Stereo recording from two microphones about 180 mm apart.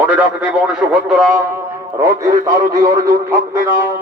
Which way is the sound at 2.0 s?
15° right (ahead or behind).